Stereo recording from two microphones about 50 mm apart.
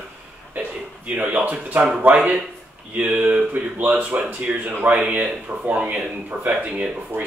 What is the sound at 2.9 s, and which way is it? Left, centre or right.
Speech, right.